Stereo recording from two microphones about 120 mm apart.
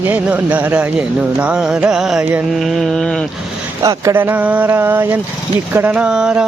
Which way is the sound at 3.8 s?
20° right (ahead or behind).